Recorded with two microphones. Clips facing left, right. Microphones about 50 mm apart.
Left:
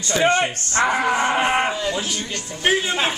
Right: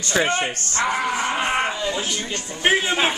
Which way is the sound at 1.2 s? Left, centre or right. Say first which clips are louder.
Left 3 dB; centre.